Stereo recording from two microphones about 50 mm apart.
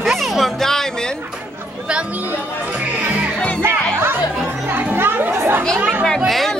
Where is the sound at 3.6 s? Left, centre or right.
Right.